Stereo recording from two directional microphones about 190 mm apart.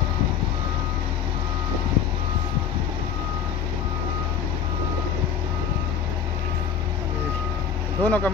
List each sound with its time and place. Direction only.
8.0 s speech: 10° left (ahead or behind)